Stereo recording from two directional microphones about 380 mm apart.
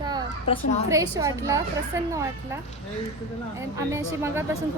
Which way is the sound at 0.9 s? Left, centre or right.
Centre.